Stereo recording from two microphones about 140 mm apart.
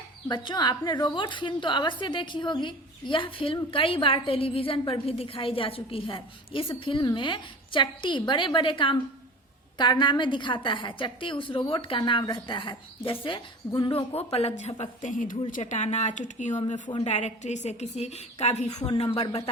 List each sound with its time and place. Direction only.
0.3 s a woman's voice: 30° left (ahead or behind); by 15.4 s 70° left (ahead or behind)
15.6 s speech: 55° left (ahead or behind)
16.9 s a woman's voice: 50° left (ahead or behind)